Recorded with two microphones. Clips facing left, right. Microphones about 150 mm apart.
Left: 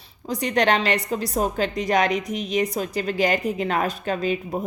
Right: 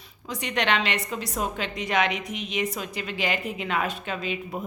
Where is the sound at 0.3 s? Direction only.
35° left (ahead or behind).